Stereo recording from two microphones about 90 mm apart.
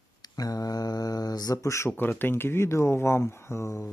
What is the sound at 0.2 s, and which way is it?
Mantra, 45° left (ahead or behind).